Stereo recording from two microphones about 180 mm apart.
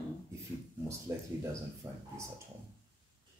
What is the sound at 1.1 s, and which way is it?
Speech, 15° right (ahead or behind).